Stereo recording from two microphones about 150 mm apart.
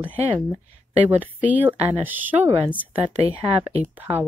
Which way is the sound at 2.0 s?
10° right (ahead or behind).